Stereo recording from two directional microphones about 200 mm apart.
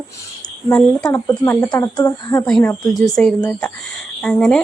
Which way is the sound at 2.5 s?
Centre (ahead or behind).